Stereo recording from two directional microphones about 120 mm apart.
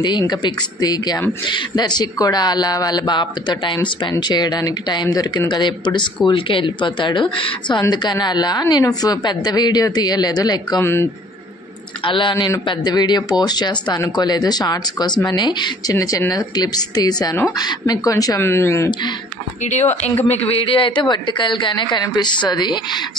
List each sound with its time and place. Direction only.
0.0 s a woman's voice: 40° left (ahead or behind)
10.8 s speech: 20° left (ahead or behind)
12.0 s speech: 45° left (ahead or behind)
15.9 s speech: 25° left (ahead or behind)
19.6 s speech: 75° left (ahead or behind)
20.2 s speech: 55° left (ahead or behind); by 23.0 s 40° left (ahead or behind)